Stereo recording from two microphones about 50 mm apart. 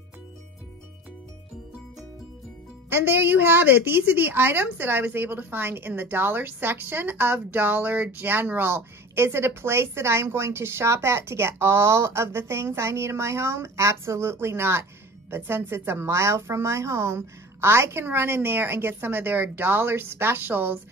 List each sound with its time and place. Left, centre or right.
2.9 s a woman's voice: right